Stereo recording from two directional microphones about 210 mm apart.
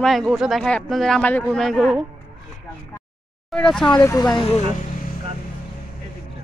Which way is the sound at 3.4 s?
5° left (ahead or behind).